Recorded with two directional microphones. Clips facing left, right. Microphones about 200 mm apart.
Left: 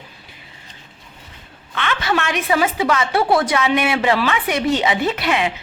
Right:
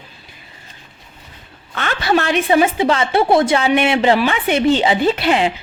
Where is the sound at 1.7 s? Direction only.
40° right (ahead or behind).